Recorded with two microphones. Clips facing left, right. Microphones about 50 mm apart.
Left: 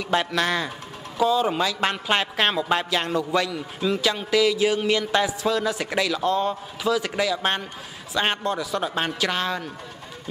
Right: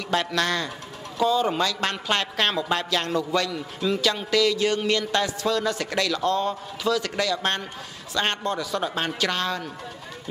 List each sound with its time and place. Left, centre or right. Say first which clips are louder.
0.1 s speech: left 1 dB; centre